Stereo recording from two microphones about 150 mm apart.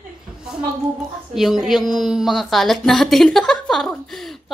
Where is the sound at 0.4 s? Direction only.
5° right (ahead or behind).